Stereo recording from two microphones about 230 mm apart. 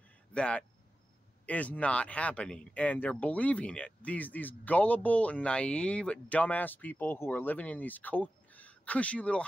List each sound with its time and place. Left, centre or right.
0.3 s speech: centre